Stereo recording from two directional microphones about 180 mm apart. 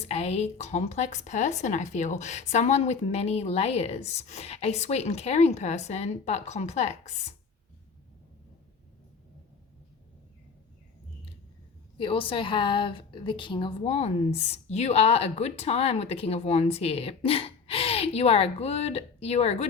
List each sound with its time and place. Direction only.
0.0 s a woman's voice: 35° left (ahead or behind)
11.9 s a woman's voice: 30° left (ahead or behind)